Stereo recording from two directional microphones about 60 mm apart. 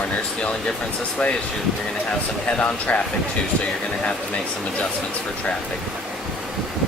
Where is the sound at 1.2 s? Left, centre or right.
Centre.